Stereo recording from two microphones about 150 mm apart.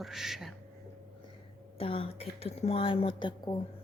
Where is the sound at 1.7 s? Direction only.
40° left (ahead or behind).